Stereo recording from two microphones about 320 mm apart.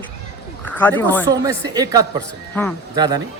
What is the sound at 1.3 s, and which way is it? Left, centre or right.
Speech, centre.